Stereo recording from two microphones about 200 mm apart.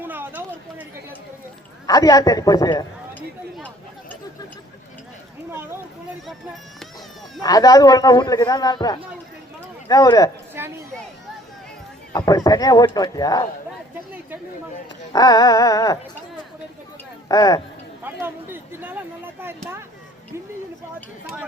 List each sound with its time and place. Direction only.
0.0 s a sound: 10° right (ahead or behind)
1.9 s a man's voice: 20° left (ahead or behind)
7.4 s a man's voice: 20° left (ahead or behind)
9.9 s music: 20° left (ahead or behind)
10.6 s speech: 10° right (ahead or behind)
12.1 s a man's voice: 20° left (ahead or behind)
15.1 s music: 20° left (ahead or behind)
17.2 s music: 20° left (ahead or behind)
18.0 s speech: 10° right (ahead or behind)